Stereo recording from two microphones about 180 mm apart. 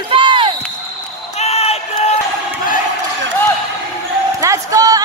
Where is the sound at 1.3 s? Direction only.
35° left (ahead or behind).